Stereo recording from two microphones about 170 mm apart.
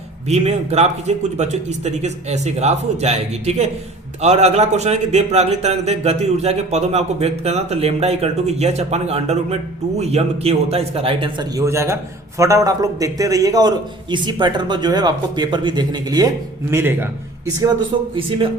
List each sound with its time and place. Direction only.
0.3 s a man's voice: 40° right (ahead or behind); by 17.7 s 15° right (ahead or behind)
17.9 s a man's voice: 30° right (ahead or behind)